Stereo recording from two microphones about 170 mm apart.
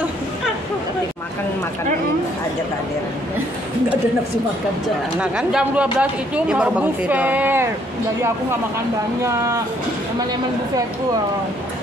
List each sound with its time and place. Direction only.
5.2 s speech: 5° right (ahead or behind)